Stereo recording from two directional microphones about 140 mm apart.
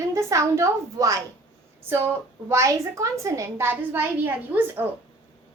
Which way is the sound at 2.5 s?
20° right (ahead or behind).